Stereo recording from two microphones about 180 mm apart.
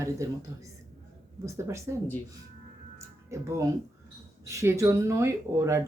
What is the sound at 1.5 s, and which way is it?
Speech, 15° right (ahead or behind).